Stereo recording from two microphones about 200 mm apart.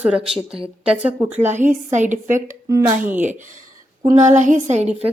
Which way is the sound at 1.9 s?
40° right (ahead or behind).